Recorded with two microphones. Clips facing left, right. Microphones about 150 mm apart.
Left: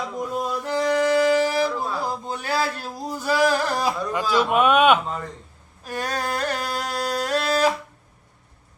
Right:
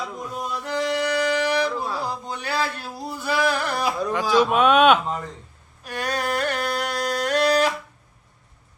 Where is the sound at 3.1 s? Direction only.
40° left (ahead or behind).